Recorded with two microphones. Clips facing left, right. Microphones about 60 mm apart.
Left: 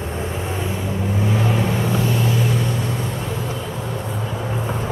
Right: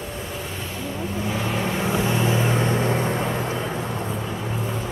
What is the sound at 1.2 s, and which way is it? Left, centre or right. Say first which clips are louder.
Vehicle: left 4 dB; centre.